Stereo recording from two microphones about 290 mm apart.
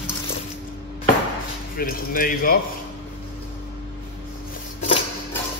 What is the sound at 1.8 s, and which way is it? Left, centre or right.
Speech, left.